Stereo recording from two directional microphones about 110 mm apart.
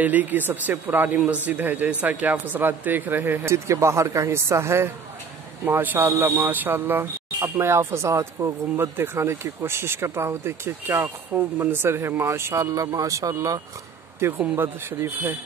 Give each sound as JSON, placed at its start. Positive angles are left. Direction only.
{"t": 0.0, "sound": "a man's voice", "side_deg": -15}
{"t": 14.2, "sound": "speech", "side_deg": -20}